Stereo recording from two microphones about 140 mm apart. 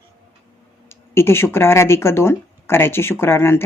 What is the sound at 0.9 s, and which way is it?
Speech, 20° left (ahead or behind).